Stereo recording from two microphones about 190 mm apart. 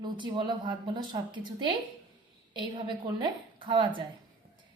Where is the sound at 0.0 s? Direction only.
25° right (ahead or behind).